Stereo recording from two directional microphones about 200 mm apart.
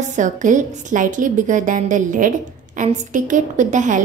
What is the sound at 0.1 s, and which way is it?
A woman's voice, 40° right (ahead or behind).